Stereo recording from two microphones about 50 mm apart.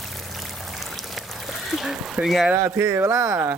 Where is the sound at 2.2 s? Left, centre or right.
Centre.